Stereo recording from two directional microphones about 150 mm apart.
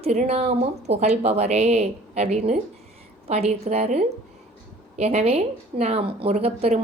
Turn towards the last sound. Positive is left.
turn(degrees=-45)  # may be behind; listen again after turning